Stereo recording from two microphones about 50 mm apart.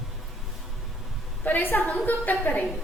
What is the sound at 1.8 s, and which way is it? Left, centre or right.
Speech, left.